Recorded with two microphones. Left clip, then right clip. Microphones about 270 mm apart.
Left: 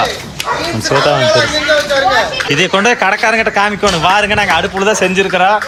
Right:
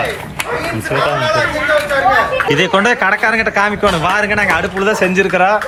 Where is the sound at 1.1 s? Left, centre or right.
Left.